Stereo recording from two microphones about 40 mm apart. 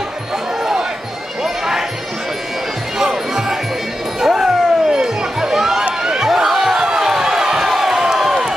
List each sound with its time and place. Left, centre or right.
1.4 s basketball bounce: centre
3.0 s music: centre
4.2 s a sound: centre